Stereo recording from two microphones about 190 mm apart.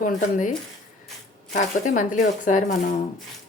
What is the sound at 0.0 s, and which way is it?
Speech, 45° left (ahead or behind).